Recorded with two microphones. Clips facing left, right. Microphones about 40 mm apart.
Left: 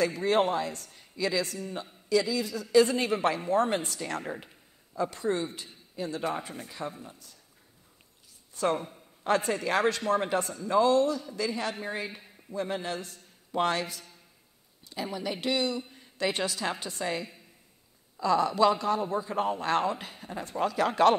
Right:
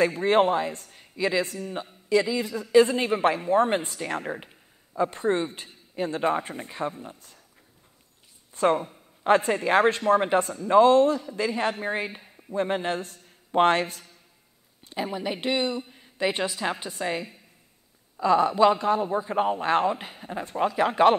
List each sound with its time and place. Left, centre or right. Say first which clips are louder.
0.0 s a man's voice: right 5 dB; right
8.6 s a man's voice: right 6 dB; right
14.9 s a man's voice: right 4 dB; right
15.8 s a woman's voice: right 4 dB; centre